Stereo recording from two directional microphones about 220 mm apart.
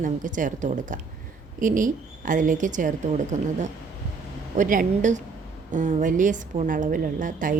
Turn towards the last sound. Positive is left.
turn(degrees=-35)  # may be behind; listen again after turning